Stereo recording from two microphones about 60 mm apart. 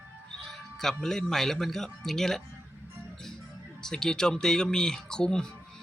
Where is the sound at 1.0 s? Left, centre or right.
Centre.